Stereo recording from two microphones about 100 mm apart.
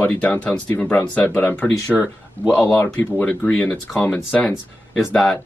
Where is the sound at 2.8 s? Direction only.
20° left (ahead or behind); by 5.4 s centre (ahead or behind).